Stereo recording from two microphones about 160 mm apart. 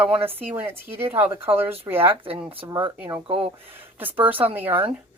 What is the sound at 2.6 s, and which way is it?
Speech, 25° right (ahead or behind).